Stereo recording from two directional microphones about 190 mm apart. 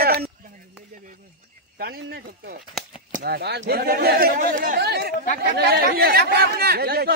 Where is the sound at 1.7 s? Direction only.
55° right (ahead or behind).